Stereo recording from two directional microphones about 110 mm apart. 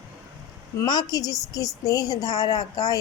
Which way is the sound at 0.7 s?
35° left (ahead or behind).